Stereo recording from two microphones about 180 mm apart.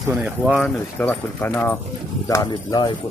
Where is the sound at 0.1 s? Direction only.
5° right (ahead or behind).